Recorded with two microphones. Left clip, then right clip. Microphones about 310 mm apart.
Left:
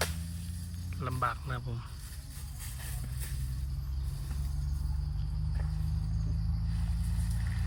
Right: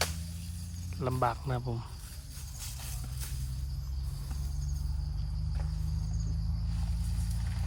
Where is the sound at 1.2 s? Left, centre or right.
Centre.